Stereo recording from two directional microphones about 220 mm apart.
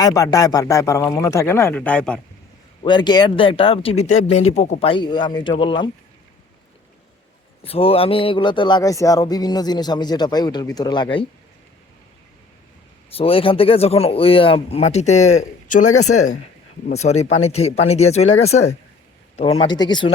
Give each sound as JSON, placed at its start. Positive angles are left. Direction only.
{"t": 0.0, "sound": "speech", "side_deg": 15}
{"t": 2.8, "sound": "speech", "side_deg": 20}
{"t": 7.6, "sound": "speech", "side_deg": 25}
{"t": 13.1, "sound": "speech", "side_deg": 25}
{"t": 15.9, "sound": "speech", "side_deg": 85}
{"t": 16.9, "sound": "speech", "side_deg": 30}